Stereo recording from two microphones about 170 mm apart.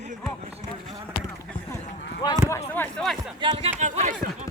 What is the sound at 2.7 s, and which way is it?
Speech, centre (ahead or behind).